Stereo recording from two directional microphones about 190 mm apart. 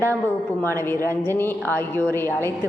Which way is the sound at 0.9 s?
10° left (ahead or behind).